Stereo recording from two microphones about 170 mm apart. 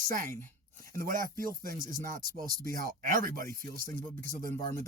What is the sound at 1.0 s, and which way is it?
Speech, 55° right (ahead or behind).